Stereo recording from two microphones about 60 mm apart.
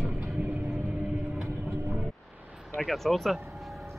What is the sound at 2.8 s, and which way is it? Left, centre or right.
Speech, centre.